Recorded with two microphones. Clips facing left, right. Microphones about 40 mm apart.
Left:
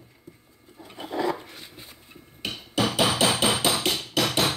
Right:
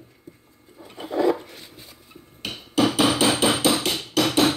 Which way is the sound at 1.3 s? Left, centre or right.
Centre.